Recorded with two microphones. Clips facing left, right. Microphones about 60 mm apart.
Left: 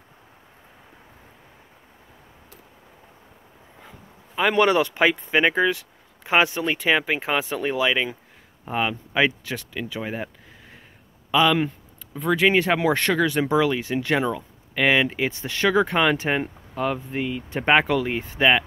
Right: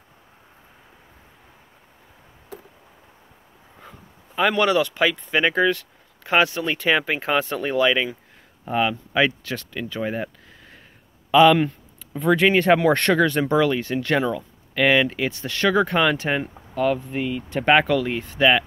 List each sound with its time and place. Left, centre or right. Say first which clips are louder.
4.4 s speech: even; centre
4.6 s speech: left 1 dB; left
9.8 s a sound: right 4 dB; centre
11.3 s speech: right 5 dB; centre; by 18.5 s left